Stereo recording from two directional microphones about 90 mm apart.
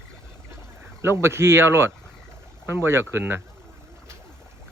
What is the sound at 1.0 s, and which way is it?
Speech, 30° right (ahead or behind).